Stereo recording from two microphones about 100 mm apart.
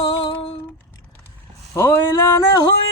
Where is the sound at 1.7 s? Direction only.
25° left (ahead or behind).